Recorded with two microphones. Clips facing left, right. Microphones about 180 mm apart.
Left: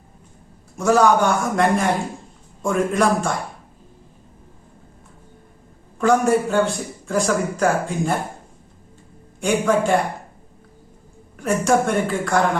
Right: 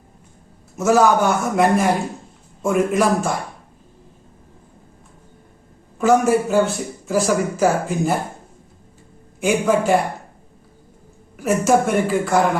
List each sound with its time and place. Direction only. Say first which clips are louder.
0.8 s a man's voice: right 1 dB; 5° right (ahead or behind)
6.0 s a man's voice: right 1 dB; 5° right (ahead or behind)
9.4 s a man's voice: right 1 dB; 5° right (ahead or behind)
11.3 s a man's voice: right 2 dB; 5° right (ahead or behind)